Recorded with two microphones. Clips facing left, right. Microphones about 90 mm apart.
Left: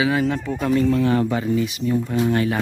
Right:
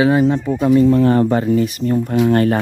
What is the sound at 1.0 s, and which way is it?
Speech, 40° right (ahead or behind).